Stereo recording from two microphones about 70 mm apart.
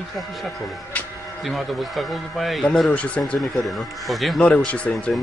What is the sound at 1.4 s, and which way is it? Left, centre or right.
A man's voice, centre.